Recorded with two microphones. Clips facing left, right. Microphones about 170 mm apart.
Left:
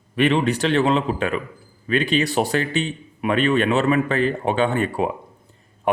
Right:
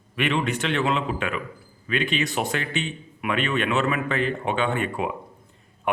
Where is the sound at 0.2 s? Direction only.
35° left (ahead or behind).